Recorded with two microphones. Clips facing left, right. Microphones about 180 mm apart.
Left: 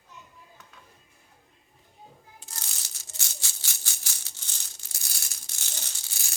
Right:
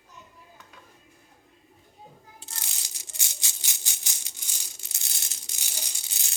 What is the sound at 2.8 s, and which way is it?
Rattle, 15° right (ahead or behind).